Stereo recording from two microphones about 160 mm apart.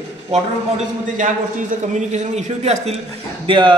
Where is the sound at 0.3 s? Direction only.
40° right (ahead or behind).